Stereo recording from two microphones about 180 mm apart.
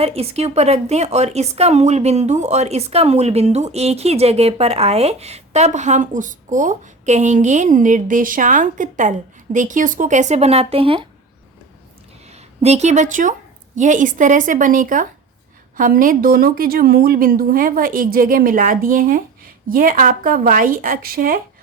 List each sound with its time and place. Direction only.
0.0 s speech: 35° right (ahead or behind)
12.3 s a woman's voice: 35° right (ahead or behind)